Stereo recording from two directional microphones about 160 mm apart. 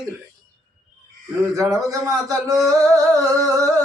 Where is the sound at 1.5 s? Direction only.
20° right (ahead or behind).